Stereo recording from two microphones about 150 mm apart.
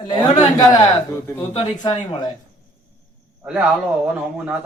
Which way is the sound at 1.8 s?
35° left (ahead or behind).